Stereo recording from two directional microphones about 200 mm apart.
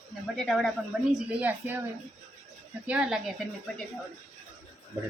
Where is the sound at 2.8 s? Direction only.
5° right (ahead or behind).